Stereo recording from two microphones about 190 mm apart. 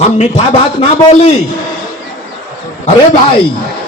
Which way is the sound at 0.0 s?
30° left (ahead or behind).